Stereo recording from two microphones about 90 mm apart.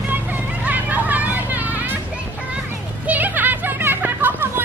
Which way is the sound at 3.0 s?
20° right (ahead or behind).